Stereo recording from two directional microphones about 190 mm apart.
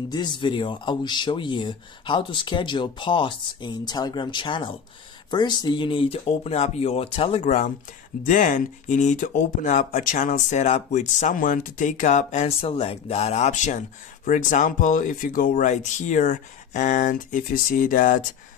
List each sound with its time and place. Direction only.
0.1 s speech: 25° left (ahead or behind); by 18.2 s 45° left (ahead or behind)